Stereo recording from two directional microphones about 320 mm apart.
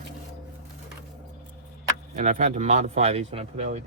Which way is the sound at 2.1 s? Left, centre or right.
Right.